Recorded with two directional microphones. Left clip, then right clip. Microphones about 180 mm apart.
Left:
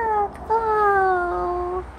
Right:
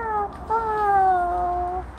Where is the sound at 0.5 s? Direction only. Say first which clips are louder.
Left 2 dB; 55° left (ahead or behind).